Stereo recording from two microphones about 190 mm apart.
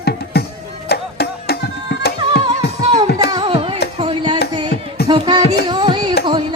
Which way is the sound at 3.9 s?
30° right (ahead or behind).